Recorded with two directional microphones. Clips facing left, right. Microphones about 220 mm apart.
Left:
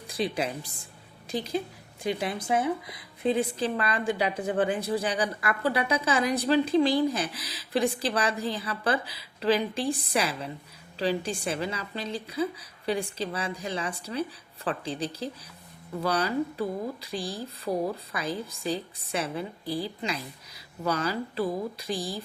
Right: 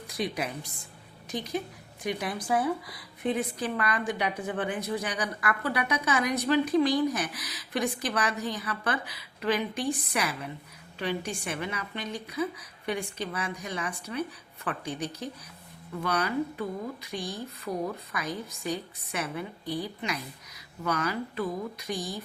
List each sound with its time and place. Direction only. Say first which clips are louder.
0.1 s a woman's voice: left 3 dB; 30° left (ahead or behind)